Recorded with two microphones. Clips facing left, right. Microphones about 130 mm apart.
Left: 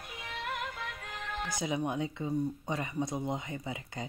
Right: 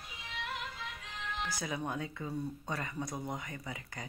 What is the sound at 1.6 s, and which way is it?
Speech, 20° left (ahead or behind).